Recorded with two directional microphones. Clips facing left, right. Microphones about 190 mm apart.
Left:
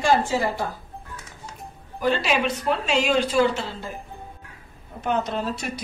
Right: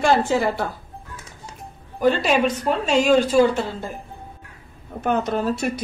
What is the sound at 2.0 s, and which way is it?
A woman's voice, 50° right (ahead or behind).